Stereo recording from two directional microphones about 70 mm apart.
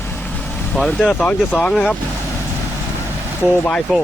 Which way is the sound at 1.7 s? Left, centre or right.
Centre.